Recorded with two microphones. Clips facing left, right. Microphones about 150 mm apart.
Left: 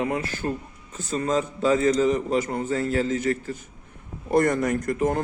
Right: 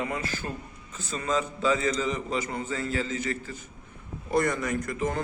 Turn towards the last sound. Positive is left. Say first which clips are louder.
# left 6 dB
turn(degrees=50)  # may be behind; listen again after turning